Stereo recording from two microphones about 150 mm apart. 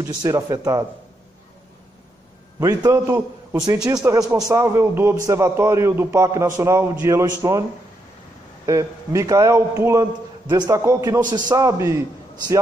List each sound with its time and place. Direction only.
0.0 s a man's voice: 25° right (ahead or behind)
2.6 s a man's voice: 20° right (ahead or behind)
8.6 s a man's voice: 20° right (ahead or behind)